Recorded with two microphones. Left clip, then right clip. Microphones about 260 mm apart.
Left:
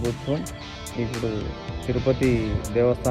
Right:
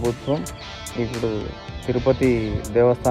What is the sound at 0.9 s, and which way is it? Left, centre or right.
Speech, centre.